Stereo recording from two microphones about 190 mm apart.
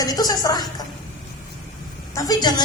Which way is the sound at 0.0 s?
20° left (ahead or behind).